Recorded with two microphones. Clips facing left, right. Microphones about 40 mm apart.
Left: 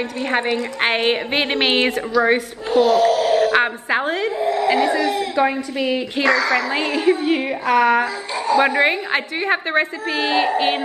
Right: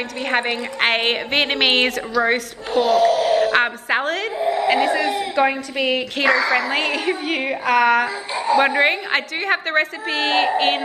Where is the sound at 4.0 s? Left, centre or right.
Centre.